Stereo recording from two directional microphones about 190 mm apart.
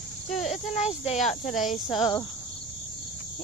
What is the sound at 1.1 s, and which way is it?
Speech, centre (ahead or behind).